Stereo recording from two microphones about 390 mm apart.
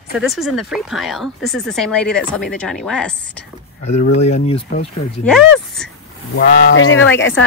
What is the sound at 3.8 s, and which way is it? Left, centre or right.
Speech, centre.